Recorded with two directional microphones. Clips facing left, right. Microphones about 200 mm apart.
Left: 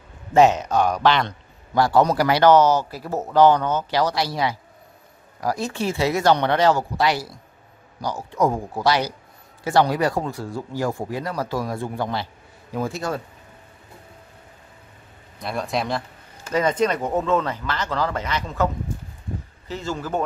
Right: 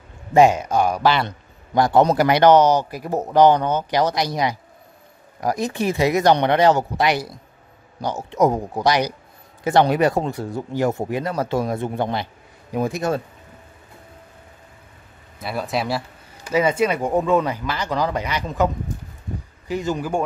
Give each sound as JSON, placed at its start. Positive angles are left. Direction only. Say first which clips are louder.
{"t": 0.3, "sound": "speech", "louder": "right 1 dB", "side_deg": -10}
{"t": 1.7, "sound": "a man's voice", "louder": "right 2 dB", "side_deg": -20}
{"t": 15.3, "sound": "speech", "louder": "right 1 dB", "side_deg": -5}
{"t": 19.7, "sound": "speech", "louder": "right 4 dB", "side_deg": -15}